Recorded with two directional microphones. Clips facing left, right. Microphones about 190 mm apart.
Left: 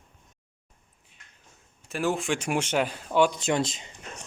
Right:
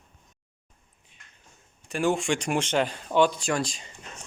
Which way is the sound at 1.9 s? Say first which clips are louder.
Right 2 dB; centre (ahead or behind).